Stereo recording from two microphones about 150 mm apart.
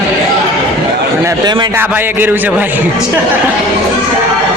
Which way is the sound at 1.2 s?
25° right (ahead or behind).